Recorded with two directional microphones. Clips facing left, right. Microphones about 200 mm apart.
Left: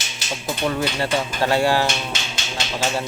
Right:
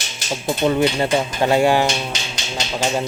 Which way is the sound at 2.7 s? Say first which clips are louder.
Right 3 dB; 15° right (ahead or behind).